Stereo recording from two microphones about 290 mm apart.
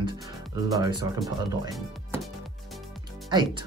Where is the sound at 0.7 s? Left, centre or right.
Centre.